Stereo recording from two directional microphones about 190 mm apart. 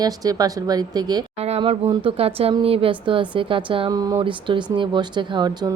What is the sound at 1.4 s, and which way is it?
A woman's voice, 30° right (ahead or behind).